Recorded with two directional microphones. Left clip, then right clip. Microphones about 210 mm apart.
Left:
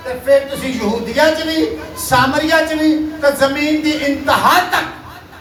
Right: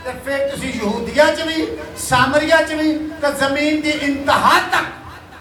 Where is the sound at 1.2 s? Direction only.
15° right (ahead or behind).